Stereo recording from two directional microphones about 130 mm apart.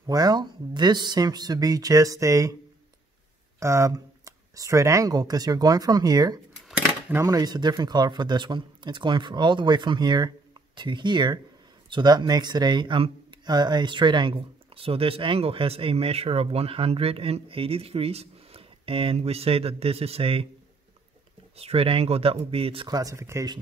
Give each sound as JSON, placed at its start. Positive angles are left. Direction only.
{"t": 0.0, "sound": "speech", "side_deg": -30}
{"t": 3.5, "sound": "speech", "side_deg": -20}
{"t": 21.5, "sound": "speech", "side_deg": -50}
{"t": 22.8, "sound": "speech", "side_deg": -30}